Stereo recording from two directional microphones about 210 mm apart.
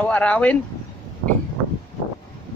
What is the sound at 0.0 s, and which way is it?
Speech, 5° left (ahead or behind).